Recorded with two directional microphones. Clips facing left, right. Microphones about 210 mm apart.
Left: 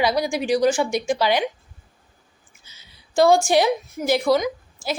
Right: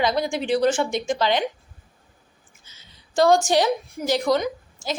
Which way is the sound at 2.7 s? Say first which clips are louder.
Left 2 dB; 10° left (ahead or behind).